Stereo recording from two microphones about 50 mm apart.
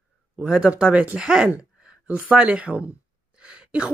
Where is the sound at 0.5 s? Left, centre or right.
Right.